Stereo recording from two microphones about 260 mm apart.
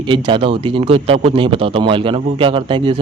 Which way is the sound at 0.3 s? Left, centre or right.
Centre.